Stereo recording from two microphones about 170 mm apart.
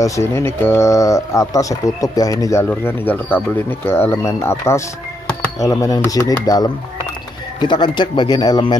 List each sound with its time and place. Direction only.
0.0 s speech: 15° left (ahead or behind)